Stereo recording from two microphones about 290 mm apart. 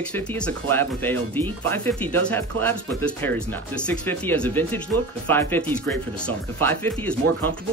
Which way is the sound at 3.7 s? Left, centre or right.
Centre.